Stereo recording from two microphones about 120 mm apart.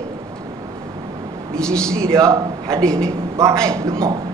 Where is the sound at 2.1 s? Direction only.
25° right (ahead or behind).